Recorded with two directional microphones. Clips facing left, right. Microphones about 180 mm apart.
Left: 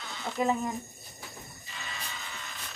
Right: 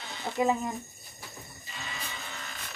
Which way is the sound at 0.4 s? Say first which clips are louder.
Right 2 dB; 10° right (ahead or behind).